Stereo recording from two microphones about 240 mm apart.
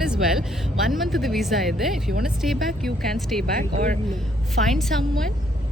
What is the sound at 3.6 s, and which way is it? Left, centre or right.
Speech, right.